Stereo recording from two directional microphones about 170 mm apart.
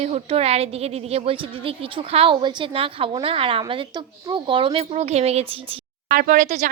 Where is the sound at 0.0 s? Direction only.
35° right (ahead or behind).